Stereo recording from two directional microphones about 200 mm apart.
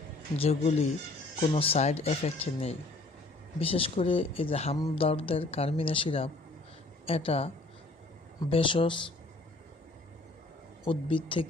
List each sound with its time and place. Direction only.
0.3 s speech: 30° left (ahead or behind)
10.8 s speech: 25° left (ahead or behind)